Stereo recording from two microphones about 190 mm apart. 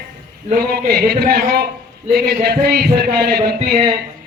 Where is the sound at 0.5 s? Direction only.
55° right (ahead or behind).